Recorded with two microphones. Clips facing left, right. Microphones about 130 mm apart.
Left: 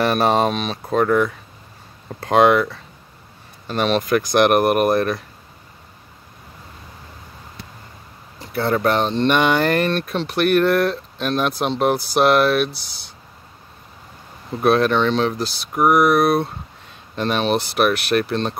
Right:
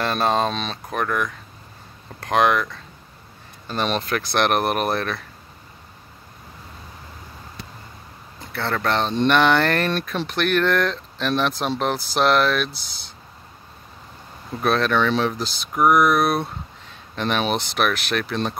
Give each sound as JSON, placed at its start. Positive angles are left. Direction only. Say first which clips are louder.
{"t": 0.0, "sound": "speech", "louder": "left 4 dB", "side_deg": 15}
{"t": 0.8, "sound": "speech", "louder": "left 8 dB", "side_deg": 25}
{"t": 3.6, "sound": "speech", "louder": "left 4 dB", "side_deg": 5}
{"t": 8.4, "sound": "speech", "louder": "left 6 dB", "side_deg": 10}
{"t": 14.6, "sound": "speech", "louder": "left 4 dB", "side_deg": 5}